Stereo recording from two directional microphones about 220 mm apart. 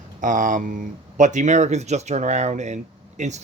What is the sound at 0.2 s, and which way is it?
Speech, 35° right (ahead or behind).